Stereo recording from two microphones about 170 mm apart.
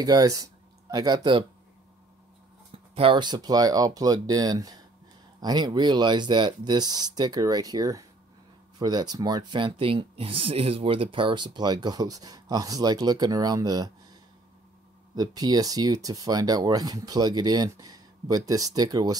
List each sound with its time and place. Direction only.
0.0 s speech: 20° right (ahead or behind)
2.9 s speech: 30° right (ahead or behind)
15.1 s speech: 25° right (ahead or behind)